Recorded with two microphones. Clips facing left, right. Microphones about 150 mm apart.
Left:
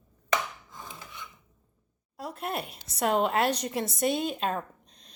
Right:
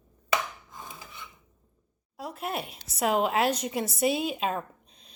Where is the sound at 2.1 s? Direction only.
Centre (ahead or behind).